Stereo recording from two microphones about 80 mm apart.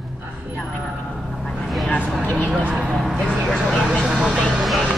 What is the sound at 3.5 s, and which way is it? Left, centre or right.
Vehicle, centre.